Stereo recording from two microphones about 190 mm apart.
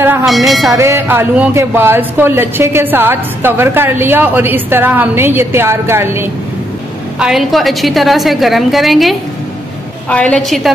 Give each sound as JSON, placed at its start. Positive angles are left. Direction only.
{"t": 0.2, "sound": "a woman's voice", "side_deg": 0}
{"t": 0.7, "sound": "speech", "side_deg": -15}
{"t": 7.2, "sound": "a woman's voice", "side_deg": 0}